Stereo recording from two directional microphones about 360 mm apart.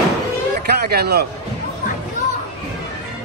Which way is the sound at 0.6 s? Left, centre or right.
Right.